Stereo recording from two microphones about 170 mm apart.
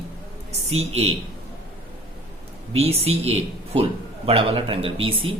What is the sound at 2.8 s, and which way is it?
A man's voice, 35° right (ahead or behind).